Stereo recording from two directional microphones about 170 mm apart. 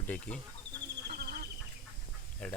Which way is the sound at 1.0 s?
65° right (ahead or behind).